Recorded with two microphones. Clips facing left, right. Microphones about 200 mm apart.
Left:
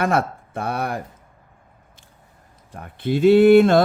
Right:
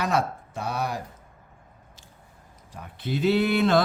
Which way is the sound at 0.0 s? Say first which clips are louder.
Left 5 dB; 55° left (ahead or behind).